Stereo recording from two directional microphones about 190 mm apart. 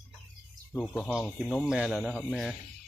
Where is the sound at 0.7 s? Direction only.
10° left (ahead or behind).